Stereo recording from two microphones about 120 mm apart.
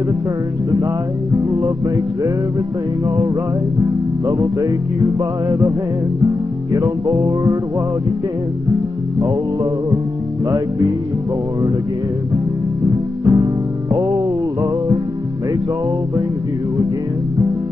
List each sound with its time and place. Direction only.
1.3 s music: 25° right (ahead or behind)
3.8 s music: 25° right (ahead or behind)
12.8 s music: 25° right (ahead or behind)